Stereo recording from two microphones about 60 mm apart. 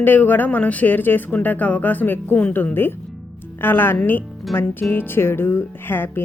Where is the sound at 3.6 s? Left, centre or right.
Left.